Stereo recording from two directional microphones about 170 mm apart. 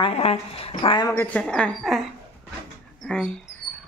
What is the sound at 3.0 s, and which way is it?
Dog, 5° left (ahead or behind).